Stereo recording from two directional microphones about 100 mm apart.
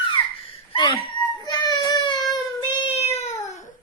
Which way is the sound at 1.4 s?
45° left (ahead or behind).